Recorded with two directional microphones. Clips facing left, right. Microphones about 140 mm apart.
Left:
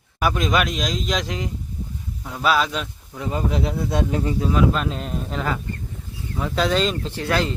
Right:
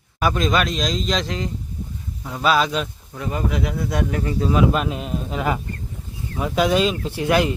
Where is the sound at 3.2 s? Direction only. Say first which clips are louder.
Even; 25° left (ahead or behind).